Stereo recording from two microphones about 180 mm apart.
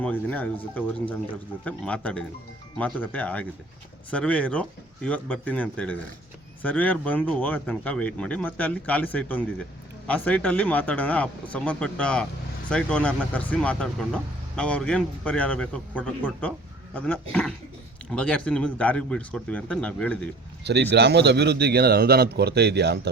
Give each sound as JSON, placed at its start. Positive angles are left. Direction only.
{"t": 0.0, "sound": "speech", "side_deg": 10}
{"t": 20.9, "sound": "speech", "side_deg": -70}